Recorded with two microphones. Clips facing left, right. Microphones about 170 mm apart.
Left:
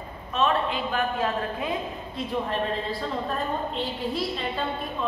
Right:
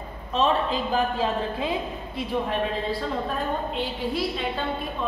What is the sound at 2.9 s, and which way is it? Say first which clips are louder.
A woman's voice: right 2 dB; centre (ahead or behind).